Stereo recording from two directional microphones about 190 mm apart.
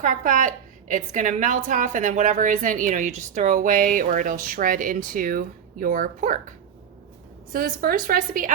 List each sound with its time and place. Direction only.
0.0 s a woman's voice: 45° right (ahead or behind)
7.5 s a woman's voice: 50° right (ahead or behind)